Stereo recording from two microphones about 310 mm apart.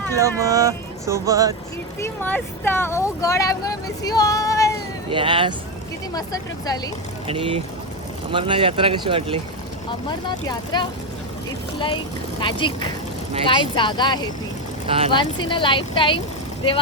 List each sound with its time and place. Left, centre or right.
0.1 s speech: centre
2.0 s speech: centre
5.1 s speech: centre
6.1 s speech: centre
7.3 s speech: centre
10.2 s speech: centre
12.4 s speech: centre
14.8 s speech: centre
15.1 s speech: centre